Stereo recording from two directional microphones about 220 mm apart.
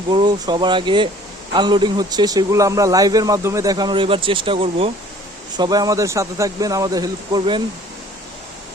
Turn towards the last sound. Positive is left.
turn(degrees=-20)  # may be behind; listen again after turning